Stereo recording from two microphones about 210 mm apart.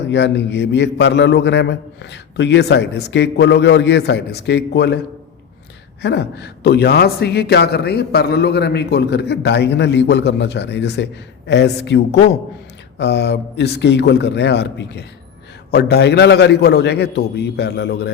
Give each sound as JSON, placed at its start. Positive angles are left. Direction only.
{"t": 0.1, "sound": "a man's voice", "side_deg": 55}
{"t": 6.0, "sound": "a man's voice", "side_deg": 55}